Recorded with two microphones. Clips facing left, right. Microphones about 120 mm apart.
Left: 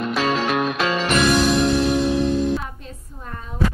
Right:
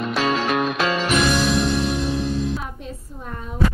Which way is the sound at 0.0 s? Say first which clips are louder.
Even; centre (ahead or behind).